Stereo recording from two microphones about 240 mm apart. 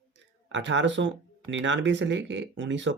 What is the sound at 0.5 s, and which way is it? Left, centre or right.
Speech, right.